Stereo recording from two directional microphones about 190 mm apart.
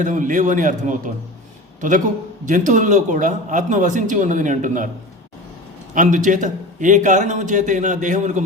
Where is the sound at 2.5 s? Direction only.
40° right (ahead or behind).